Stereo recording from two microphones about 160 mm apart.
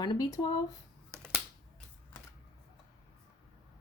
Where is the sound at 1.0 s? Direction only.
15° right (ahead or behind).